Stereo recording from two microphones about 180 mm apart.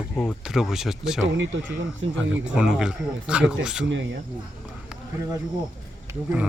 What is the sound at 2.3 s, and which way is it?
Speech, 5° right (ahead or behind).